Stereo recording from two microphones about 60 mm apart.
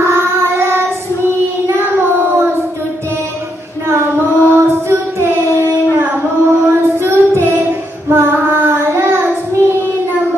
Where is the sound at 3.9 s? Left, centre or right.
Right.